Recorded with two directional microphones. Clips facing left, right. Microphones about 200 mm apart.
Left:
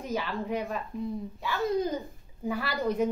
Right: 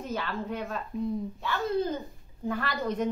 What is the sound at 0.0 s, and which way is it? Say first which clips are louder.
A woman's voice: left 1 dB; 10° left (ahead or behind).